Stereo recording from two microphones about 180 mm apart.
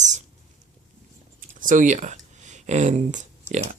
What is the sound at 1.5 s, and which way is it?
Speech, 45° right (ahead or behind).